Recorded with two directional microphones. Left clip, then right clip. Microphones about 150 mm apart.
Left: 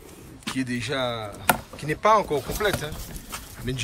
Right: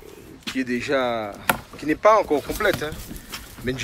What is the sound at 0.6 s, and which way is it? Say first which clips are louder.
Speech: right 5 dB; 20° left (ahead or behind).